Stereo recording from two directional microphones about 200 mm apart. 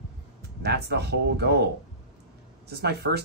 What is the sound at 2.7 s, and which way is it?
Speech, 55° right (ahead or behind).